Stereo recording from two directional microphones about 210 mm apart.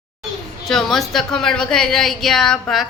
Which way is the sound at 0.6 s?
Centre (ahead or behind).